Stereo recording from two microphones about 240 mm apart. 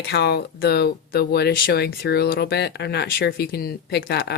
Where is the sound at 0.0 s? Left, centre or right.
Left.